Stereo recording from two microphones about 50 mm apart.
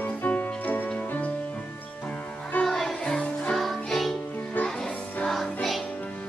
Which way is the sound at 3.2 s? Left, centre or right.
Left.